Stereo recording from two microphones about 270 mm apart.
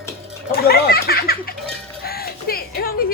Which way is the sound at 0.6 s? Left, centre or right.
Left.